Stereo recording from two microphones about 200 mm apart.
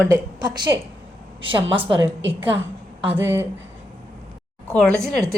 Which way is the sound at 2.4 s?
10° right (ahead or behind).